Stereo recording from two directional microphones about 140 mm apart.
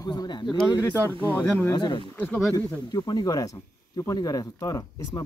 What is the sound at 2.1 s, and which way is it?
Speech, 10° left (ahead or behind).